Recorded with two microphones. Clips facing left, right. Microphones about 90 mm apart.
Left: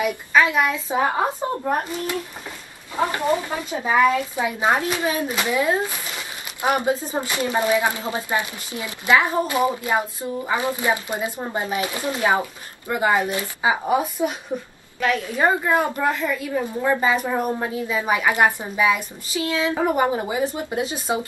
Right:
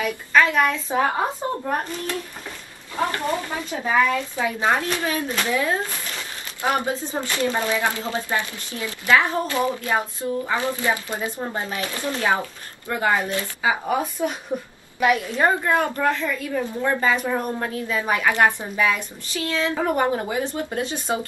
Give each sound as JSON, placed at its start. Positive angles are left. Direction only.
{"t": 0.0, "sound": "speech", "side_deg": 10}
{"t": 14.2, "sound": "speech", "side_deg": 10}
{"t": 15.0, "sound": "a woman's voice", "side_deg": -15}
{"t": 15.3, "sound": "speech", "side_deg": 5}